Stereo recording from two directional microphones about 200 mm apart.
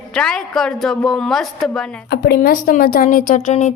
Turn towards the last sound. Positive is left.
turn(degrees=35)  # may be behind; listen again after turning